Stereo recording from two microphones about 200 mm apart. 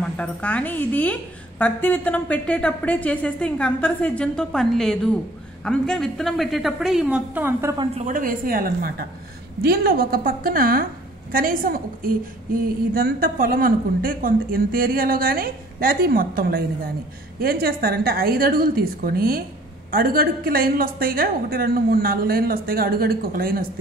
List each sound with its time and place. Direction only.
0.2 s a woman's voice: 5° left (ahead or behind); by 7.7 s 10° right (ahead or behind)
7.7 s a woman's voice: 25° right (ahead or behind)
8.0 s a woman's voice: 45° right (ahead or behind)